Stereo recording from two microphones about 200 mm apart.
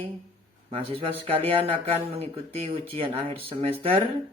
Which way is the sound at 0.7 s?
30° right (ahead or behind).